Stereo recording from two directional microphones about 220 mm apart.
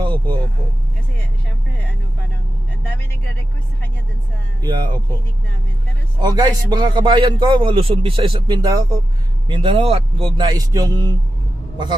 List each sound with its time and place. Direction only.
0.0 s vehicle: 20° right (ahead or behind)
4.6 s a man's voice: 20° right (ahead or behind)
6.1 s a man's voice: 20° right (ahead or behind)